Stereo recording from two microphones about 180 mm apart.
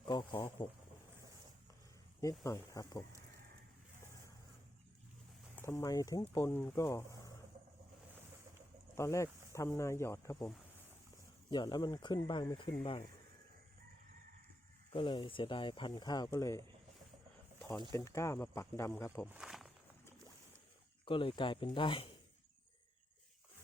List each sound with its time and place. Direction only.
0.1 s speech: 25° left (ahead or behind)
2.2 s speech: 15° left (ahead or behind)
5.6 s speech: 20° left (ahead or behind)
9.0 s speech: 15° left (ahead or behind)
11.5 s speech: 25° left (ahead or behind)
14.9 s speech: 25° left (ahead or behind)
17.9 s speech: 15° left (ahead or behind)
19.3 s walk: 5° right (ahead or behind)
21.0 s speech: 30° left (ahead or behind)